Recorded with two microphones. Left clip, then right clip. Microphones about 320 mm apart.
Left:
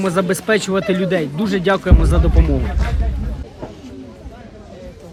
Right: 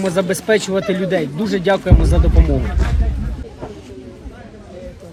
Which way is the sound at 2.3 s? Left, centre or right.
Left.